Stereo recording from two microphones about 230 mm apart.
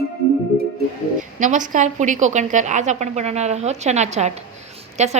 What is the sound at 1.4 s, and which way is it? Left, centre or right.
A woman's voice, right.